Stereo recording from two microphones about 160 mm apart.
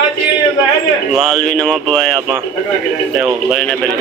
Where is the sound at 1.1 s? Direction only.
5° left (ahead or behind).